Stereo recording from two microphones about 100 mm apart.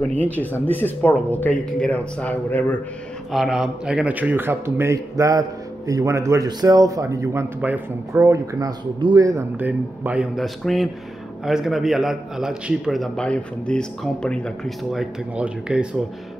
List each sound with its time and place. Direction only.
0.1 s speech: 15° left (ahead or behind)
3.3 s speech: 5° right (ahead or behind); by 9.5 s 30° right (ahead or behind)
9.6 s speech: 15° right (ahead or behind)
10.3 s a man's voice: centre (ahead or behind)
15.3 s speech: 10° right (ahead or behind)